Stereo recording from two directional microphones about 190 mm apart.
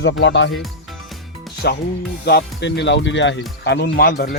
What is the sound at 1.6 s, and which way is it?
Speech, 55° left (ahead or behind).